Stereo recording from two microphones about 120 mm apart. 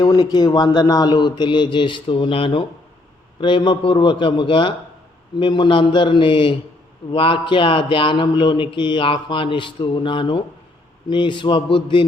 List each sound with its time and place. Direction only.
0.0 s a man's voice: 35° left (ahead or behind)